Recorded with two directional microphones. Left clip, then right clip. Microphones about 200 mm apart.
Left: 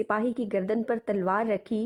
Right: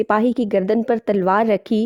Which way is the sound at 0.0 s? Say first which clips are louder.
Right 10 dB; 40° right (ahead or behind).